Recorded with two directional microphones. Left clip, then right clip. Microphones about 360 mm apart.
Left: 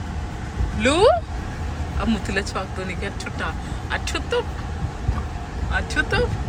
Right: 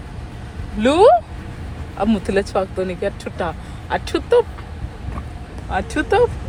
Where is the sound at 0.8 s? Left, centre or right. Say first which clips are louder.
Right 5 dB; centre.